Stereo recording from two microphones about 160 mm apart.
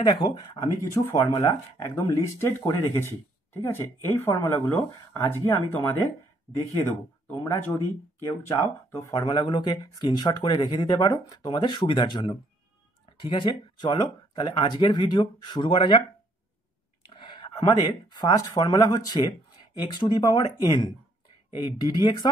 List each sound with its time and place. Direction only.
0.0 s speech: 30° left (ahead or behind)
1.4 s speech: 15° left (ahead or behind); by 16.0 s 30° left (ahead or behind)
17.1 s speech: 30° left (ahead or behind)